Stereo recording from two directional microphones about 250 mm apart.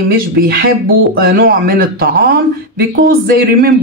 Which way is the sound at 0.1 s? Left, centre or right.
Right.